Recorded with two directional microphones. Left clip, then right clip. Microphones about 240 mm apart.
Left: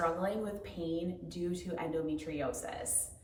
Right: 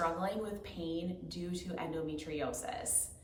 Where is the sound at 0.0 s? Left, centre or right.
Centre.